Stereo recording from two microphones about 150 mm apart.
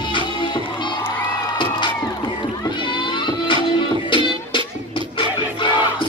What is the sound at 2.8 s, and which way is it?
Music, 30° left (ahead or behind).